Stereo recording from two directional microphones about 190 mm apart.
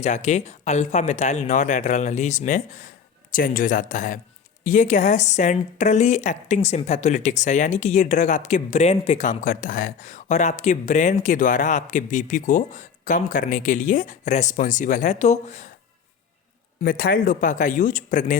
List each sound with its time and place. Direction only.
0.0 s speech: 40° left (ahead or behind)
16.8 s speech: 50° left (ahead or behind)